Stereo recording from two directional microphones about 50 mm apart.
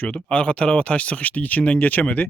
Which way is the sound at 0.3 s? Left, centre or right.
Left.